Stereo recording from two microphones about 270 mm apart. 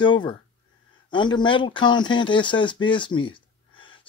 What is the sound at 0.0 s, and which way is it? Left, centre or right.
Speech, centre.